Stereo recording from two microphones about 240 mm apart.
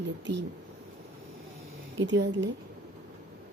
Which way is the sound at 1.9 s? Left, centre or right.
Right.